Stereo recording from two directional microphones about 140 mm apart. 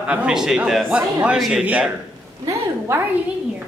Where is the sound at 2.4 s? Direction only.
15° right (ahead or behind).